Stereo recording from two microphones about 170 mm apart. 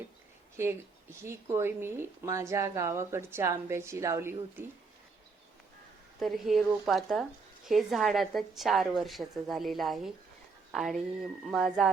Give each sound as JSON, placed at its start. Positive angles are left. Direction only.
{"t": 0.5, "sound": "speech", "side_deg": -15}
{"t": 6.1, "sound": "a woman's voice", "side_deg": 0}